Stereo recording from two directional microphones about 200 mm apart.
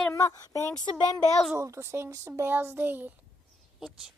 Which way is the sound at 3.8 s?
Centre (ahead or behind).